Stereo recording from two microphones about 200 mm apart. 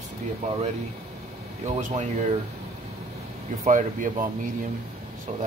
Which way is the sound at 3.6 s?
40° right (ahead or behind).